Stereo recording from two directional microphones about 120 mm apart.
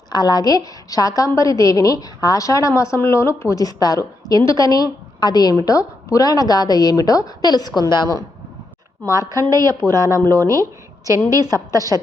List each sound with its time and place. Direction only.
0.1 s a woman's voice: 35° left (ahead or behind)
9.0 s a woman's voice: 30° right (ahead or behind)